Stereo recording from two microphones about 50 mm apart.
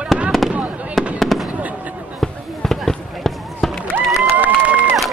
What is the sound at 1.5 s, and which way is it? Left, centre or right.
Fireworks, right.